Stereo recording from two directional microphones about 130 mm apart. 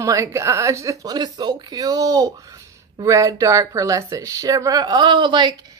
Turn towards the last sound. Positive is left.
turn(degrees=-35)  # may be behind; listen again after turning